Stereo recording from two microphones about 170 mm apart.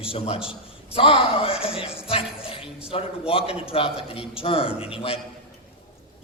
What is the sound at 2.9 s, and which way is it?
A woman's voice, 35° left (ahead or behind).